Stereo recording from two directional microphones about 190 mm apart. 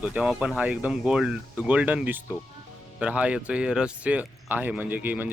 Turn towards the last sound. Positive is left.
turn(degrees=-10)  # may be behind; listen again after turning